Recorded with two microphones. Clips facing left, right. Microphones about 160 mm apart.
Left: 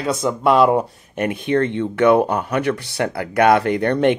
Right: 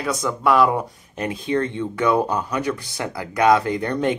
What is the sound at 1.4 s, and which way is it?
Speech, 60° left (ahead or behind).